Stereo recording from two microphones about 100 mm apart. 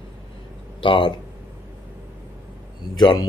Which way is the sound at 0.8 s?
55° left (ahead or behind).